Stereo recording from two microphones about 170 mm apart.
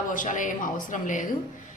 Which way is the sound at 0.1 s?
50° left (ahead or behind).